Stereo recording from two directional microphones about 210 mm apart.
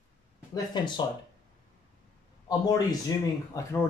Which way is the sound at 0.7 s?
20° left (ahead or behind).